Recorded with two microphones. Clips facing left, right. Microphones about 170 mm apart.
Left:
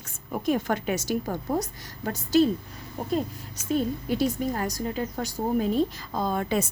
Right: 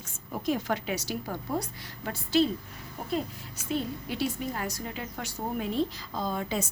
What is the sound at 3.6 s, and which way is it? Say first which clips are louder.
A woman's voice: left 6 dB; 45° left (ahead or behind).